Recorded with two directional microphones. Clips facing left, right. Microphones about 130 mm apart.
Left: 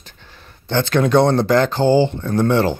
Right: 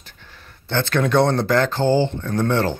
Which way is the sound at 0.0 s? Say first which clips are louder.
Left 1 dB; 25° left (ahead or behind).